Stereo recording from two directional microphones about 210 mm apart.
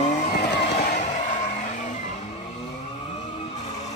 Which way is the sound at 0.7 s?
35° left (ahead or behind).